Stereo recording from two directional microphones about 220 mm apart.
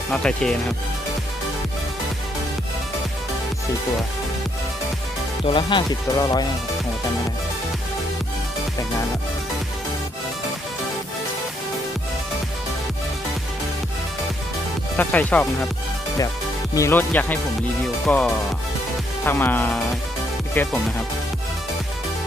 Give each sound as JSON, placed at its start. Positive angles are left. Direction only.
{"t": 0.1, "sound": "speech", "side_deg": 5}
{"t": 5.5, "sound": "speech", "side_deg": 20}
{"t": 14.9, "sound": "speech", "side_deg": 5}
{"t": 16.7, "sound": "speech", "side_deg": 10}